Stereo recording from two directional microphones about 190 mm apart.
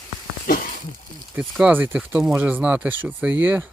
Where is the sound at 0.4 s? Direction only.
50° left (ahead or behind).